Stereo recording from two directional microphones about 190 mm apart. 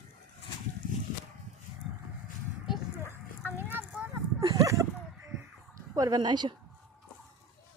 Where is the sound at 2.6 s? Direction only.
5° right (ahead or behind).